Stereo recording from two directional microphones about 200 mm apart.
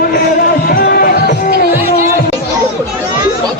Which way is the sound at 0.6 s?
50° left (ahead or behind).